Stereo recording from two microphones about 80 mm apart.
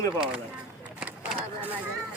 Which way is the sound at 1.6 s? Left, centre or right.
Right.